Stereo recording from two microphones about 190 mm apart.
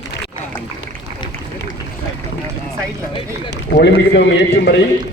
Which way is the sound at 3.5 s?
60° left (ahead or behind).